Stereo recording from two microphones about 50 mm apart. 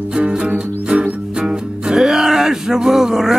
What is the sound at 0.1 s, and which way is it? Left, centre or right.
Music, centre.